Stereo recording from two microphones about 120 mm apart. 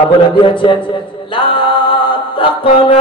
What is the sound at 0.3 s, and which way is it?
Music, 45° left (ahead or behind).